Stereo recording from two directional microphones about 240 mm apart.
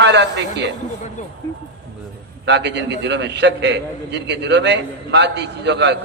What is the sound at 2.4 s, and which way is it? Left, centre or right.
A man's voice, right.